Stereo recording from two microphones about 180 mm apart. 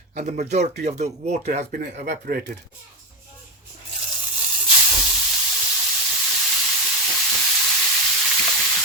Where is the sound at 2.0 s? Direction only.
60° right (ahead or behind).